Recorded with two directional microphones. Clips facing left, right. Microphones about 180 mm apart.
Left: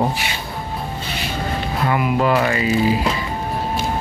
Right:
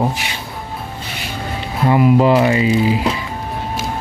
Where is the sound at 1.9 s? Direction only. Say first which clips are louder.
Right 6 dB; 25° right (ahead or behind).